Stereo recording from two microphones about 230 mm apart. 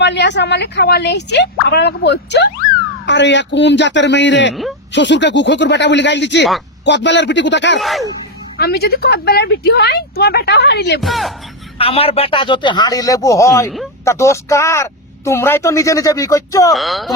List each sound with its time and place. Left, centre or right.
0.0 s a woman's voice: left
7.8 s speech: centre
8.5 s a woman's voice: left
11.0 s speech: centre
11.8 s speech: left
16.7 s speech: centre